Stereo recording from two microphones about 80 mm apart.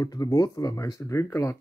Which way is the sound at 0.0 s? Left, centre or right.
Left.